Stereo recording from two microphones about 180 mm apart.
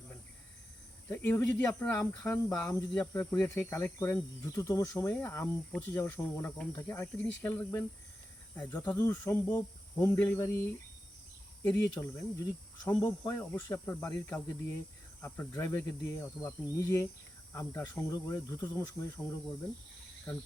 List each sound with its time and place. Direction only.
1.1 s speech: 10° left (ahead or behind)
11.6 s speech: 10° left (ahead or behind)
12.8 s speech: 25° left (ahead or behind)
13.1 s speech: 10° left (ahead or behind)